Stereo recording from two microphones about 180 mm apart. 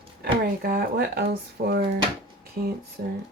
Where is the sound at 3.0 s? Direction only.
65° right (ahead or behind).